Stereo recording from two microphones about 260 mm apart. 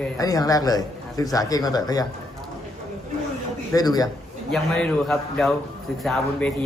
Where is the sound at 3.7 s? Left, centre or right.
Centre.